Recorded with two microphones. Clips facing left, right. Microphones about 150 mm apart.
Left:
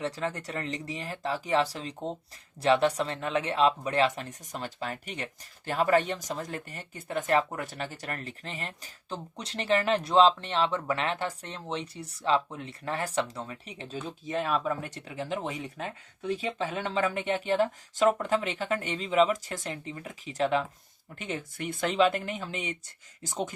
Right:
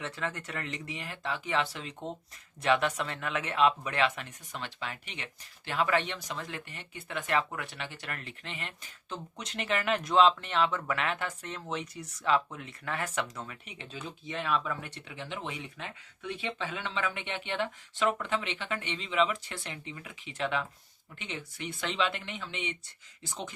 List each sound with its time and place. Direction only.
0.0 s speech: 35° left (ahead or behind)